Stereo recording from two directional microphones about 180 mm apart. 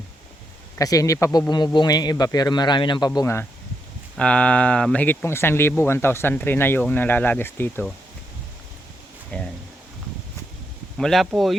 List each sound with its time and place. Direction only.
0.8 s a man's voice: 20° left (ahead or behind)
3.2 s speech: 15° left (ahead or behind)
9.3 s speech: 10° left (ahead or behind)
10.9 s speech: centre (ahead or behind)